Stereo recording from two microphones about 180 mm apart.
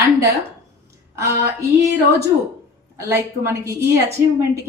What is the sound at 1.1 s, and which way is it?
Speech, 15° right (ahead or behind).